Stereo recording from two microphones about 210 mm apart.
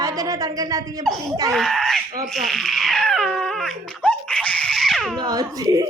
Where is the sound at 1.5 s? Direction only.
Centre (ahead or behind).